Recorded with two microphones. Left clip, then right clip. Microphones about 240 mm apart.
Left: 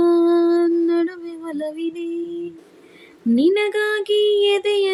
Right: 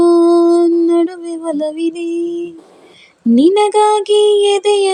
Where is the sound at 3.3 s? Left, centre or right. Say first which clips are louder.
Right 7 dB; right.